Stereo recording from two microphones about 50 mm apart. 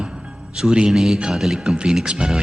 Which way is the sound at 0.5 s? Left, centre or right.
Centre.